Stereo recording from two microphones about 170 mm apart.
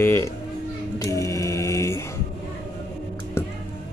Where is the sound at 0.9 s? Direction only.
20° left (ahead or behind).